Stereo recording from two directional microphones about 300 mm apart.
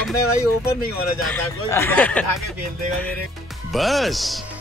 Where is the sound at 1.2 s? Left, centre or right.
Centre.